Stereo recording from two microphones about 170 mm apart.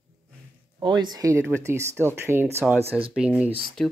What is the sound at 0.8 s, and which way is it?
Speech, 25° right (ahead or behind).